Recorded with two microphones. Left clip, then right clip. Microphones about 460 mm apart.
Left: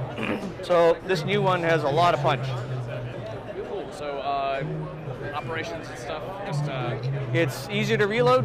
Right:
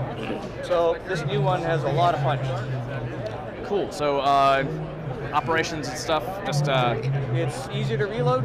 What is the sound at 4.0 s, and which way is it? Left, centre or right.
Speech, right.